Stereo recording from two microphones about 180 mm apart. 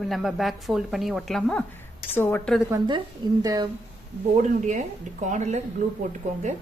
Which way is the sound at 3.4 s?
20° right (ahead or behind).